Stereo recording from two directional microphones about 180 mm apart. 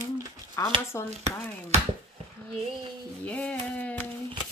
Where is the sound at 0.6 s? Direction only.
15° left (ahead or behind).